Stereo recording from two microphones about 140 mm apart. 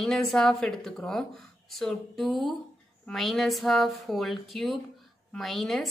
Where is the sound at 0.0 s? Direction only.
Centre (ahead or behind).